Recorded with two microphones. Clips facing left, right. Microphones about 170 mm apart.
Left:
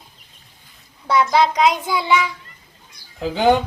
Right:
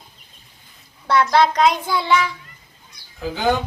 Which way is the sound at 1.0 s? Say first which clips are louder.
Even; centre (ahead or behind).